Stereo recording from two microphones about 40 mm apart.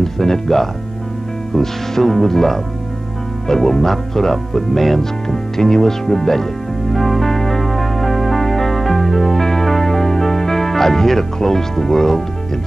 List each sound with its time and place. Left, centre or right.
0.0 s speech: centre
6.9 s music: centre